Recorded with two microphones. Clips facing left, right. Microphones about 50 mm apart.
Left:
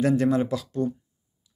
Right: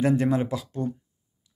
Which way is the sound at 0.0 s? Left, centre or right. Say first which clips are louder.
Left 1 dB; centre.